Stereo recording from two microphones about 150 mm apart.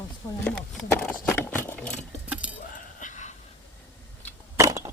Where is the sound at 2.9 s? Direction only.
55° left (ahead or behind).